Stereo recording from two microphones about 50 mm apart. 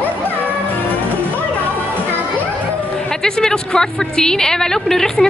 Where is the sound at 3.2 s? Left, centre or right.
Centre.